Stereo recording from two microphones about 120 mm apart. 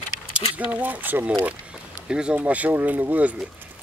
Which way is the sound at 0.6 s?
10° right (ahead or behind).